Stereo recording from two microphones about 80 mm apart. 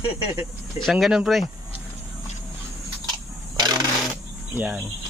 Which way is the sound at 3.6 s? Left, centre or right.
Right.